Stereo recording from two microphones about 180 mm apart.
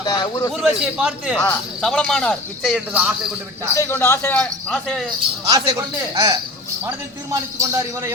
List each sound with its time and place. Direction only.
0.0 s a man's voice: 25° left (ahead or behind)
0.5 s a man's voice: 5° right (ahead or behind)
3.8 s speech: 10° left (ahead or behind)
5.5 s speech: 25° right (ahead or behind)
7.6 s a man's voice: 15° right (ahead or behind)